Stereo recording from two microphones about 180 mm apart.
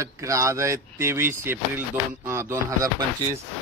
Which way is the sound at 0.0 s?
15° right (ahead or behind).